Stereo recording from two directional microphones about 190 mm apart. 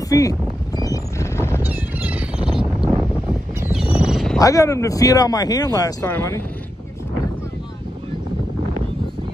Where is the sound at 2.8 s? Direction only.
10° right (ahead or behind).